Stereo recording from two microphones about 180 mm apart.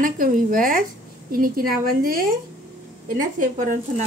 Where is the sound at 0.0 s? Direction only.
50° right (ahead or behind).